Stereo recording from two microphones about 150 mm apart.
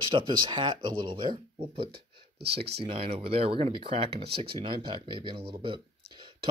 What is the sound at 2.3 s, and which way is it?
Speech, 90° right.